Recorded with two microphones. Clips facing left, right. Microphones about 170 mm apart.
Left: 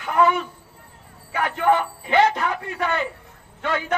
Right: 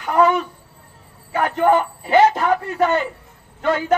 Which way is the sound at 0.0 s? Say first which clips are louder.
Right 3 dB; 40° right (ahead or behind).